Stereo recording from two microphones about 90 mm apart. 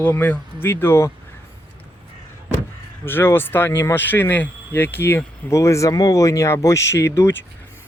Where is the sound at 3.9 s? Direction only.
20° left (ahead or behind).